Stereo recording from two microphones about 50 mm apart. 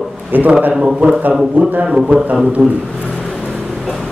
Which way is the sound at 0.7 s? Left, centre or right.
Centre.